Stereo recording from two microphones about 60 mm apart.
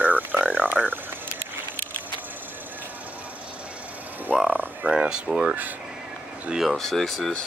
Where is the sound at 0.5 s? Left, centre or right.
Right.